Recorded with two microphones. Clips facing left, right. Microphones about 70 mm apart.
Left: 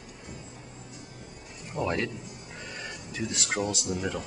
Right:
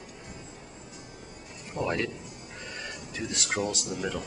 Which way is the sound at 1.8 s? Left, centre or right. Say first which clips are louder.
Even; centre.